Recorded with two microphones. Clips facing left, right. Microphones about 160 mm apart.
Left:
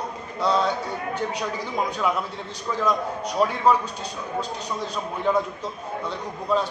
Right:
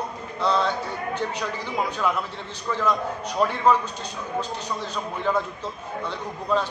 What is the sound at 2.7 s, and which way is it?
A man's voice, 10° left (ahead or behind).